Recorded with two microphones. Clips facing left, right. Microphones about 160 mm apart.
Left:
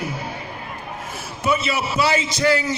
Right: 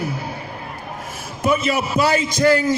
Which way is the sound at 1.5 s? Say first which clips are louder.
Right 3 dB; 50° right (ahead or behind).